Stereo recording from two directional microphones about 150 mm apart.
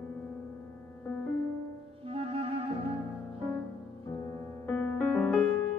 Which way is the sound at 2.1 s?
40° right (ahead or behind).